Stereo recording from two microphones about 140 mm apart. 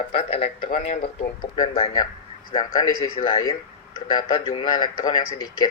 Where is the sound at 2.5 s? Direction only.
30° left (ahead or behind).